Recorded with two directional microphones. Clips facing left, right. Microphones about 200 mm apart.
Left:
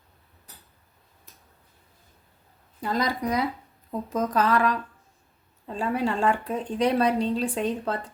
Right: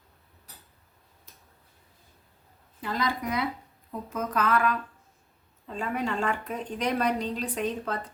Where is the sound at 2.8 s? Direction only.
40° left (ahead or behind).